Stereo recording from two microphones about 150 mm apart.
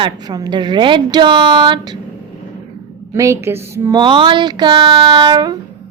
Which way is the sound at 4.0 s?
35° right (ahead or behind).